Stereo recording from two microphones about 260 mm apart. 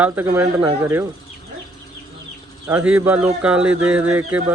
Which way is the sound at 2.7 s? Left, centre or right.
Centre.